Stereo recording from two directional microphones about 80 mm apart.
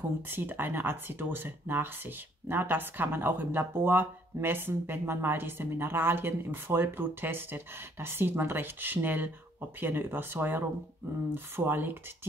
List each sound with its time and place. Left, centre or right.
0.3 s speech: right